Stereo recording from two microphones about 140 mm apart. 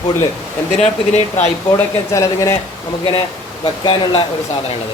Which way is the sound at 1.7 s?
20° left (ahead or behind).